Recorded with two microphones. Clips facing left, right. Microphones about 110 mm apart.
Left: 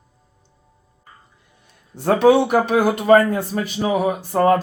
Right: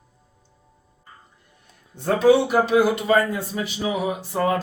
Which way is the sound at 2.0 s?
75° left (ahead or behind).